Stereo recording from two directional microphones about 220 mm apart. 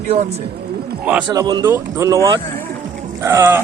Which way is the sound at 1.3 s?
20° right (ahead or behind).